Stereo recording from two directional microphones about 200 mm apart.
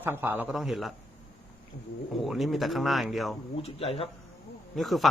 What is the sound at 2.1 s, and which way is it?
Speech, centre (ahead or behind).